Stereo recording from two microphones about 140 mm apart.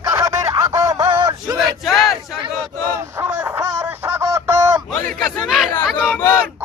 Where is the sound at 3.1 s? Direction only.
15° right (ahead or behind).